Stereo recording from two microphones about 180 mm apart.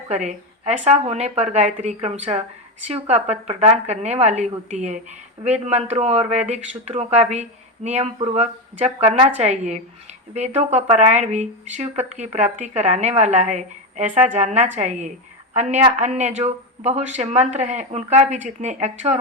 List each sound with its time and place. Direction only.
0.1 s speech: 40° right (ahead or behind)